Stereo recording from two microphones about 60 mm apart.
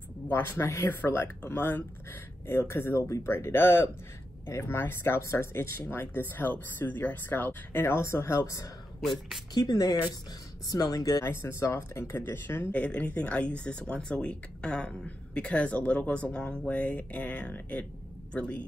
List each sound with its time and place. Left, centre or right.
0.3 s speech: left
0.8 s speech: left
9.6 s speech: left
11.2 s speech: left
12.7 s speech: left